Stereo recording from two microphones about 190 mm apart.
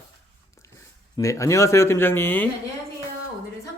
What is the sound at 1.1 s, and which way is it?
Speech, 15° left (ahead or behind).